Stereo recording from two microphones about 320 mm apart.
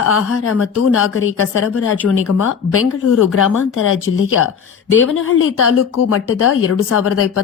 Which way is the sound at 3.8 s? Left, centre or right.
Left.